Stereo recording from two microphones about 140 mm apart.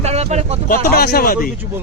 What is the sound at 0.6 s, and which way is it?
Speech, 90° left.